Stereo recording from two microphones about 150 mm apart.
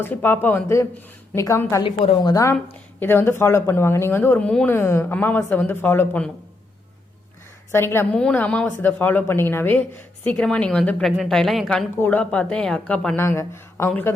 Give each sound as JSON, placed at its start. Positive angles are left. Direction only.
{"t": 0.0, "sound": "a woman's voice", "side_deg": 15}
{"t": 7.7, "sound": "speech", "side_deg": 15}
{"t": 11.9, "sound": "speech", "side_deg": 10}
{"t": 13.1, "sound": "speech", "side_deg": 20}